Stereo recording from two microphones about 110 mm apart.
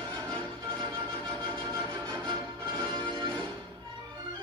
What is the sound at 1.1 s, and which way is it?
Music, 5° left (ahead or behind).